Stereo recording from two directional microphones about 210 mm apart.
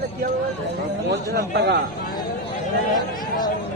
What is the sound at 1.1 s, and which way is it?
Speech, 55° right (ahead or behind).